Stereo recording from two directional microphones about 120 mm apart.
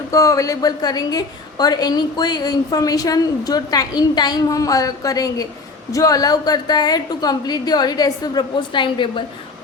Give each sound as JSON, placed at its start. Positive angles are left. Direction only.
{"t": 0.1, "sound": "a woman's voice", "side_deg": 25}